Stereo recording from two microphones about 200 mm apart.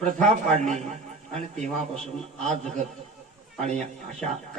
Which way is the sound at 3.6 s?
35° right (ahead or behind).